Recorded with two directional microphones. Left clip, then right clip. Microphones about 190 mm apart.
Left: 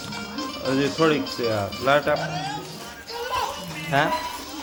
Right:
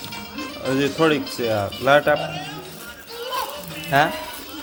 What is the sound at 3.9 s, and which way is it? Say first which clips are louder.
Speech: right 4 dB; 15° right (ahead or behind).